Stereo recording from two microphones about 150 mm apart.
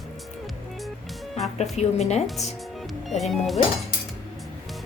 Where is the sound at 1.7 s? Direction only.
45° left (ahead or behind).